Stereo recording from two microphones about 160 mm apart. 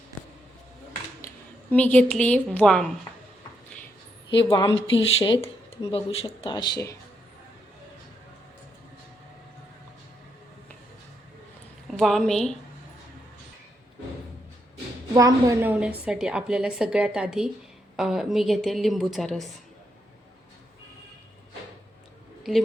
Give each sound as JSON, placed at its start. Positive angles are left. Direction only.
{"t": 1.7, "sound": "a woman's voice", "side_deg": 10}
{"t": 4.3, "sound": "speech", "side_deg": 30}
{"t": 6.4, "sound": "speech", "side_deg": 25}
{"t": 11.9, "sound": "a woman's voice", "side_deg": 0}
{"t": 15.1, "sound": "a woman's voice", "side_deg": -20}